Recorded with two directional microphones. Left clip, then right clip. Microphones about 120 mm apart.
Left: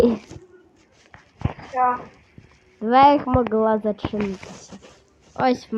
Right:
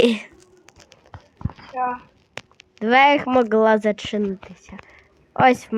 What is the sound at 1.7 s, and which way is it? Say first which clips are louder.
Speech: left 4 dB; 30° left (ahead or behind).